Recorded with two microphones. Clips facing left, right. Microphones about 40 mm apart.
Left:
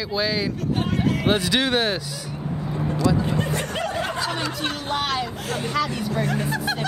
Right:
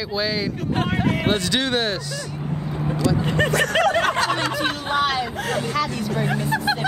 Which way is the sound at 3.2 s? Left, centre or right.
Right.